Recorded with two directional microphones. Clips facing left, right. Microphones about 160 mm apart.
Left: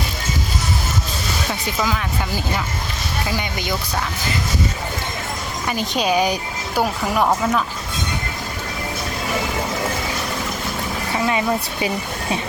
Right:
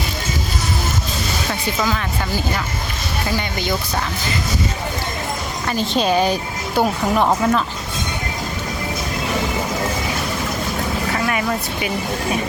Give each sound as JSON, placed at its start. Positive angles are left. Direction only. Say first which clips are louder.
{"t": 1.8, "sound": "speech", "louder": "right 1 dB", "side_deg": 5}
{"t": 5.6, "sound": "speech", "louder": "right 2 dB", "side_deg": 15}
{"t": 11.3, "sound": "speech", "louder": "left 1 dB", "side_deg": 25}